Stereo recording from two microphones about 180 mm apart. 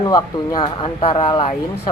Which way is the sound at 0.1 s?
25° left (ahead or behind).